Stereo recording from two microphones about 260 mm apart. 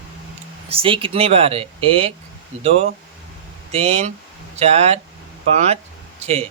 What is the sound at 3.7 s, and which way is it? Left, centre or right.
Speech, right.